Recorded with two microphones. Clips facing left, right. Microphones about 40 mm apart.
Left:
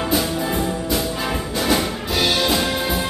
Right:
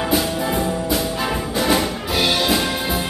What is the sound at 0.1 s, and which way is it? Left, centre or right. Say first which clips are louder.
Music: right 1 dB; centre.